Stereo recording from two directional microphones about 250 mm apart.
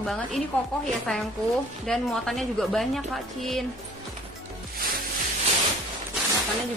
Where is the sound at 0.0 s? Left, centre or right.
Centre.